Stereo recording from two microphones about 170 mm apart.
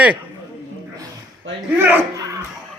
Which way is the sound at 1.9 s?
20° right (ahead or behind).